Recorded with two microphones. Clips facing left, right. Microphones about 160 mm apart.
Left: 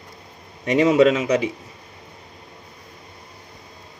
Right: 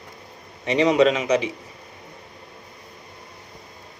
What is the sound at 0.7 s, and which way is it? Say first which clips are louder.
Speech: left 2 dB; 50° left (ahead or behind).